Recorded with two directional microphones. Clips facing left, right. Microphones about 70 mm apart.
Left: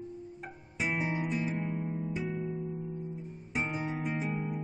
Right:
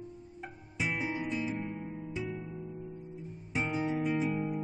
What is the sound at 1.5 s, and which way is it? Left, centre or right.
Guitar, centre.